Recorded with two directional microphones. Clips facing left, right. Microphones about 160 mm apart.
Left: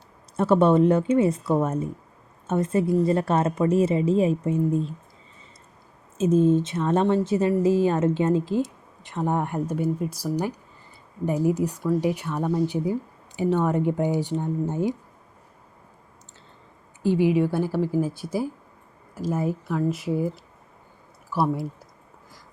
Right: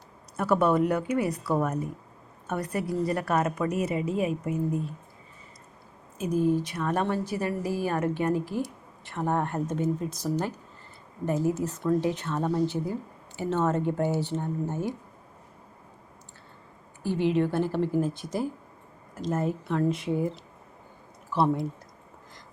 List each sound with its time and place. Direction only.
0.3 s a woman's voice: 25° left (ahead or behind)
6.1 s a woman's voice: 25° left (ahead or behind)
17.0 s speech: 15° left (ahead or behind)
21.4 s speech: 5° left (ahead or behind)